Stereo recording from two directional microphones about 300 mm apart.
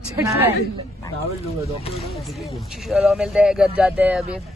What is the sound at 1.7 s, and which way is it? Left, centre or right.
Speech, centre.